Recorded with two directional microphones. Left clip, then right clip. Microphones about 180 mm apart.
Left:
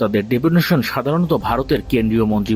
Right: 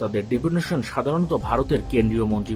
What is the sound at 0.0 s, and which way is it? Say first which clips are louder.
Speech: left 7 dB; 45° left (ahead or behind).